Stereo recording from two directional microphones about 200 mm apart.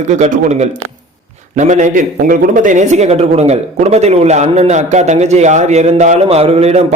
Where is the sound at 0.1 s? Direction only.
35° right (ahead or behind).